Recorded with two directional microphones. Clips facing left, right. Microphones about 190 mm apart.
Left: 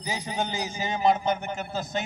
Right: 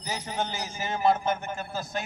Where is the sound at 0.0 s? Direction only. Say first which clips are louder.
Left 2 dB; 15° left (ahead or behind).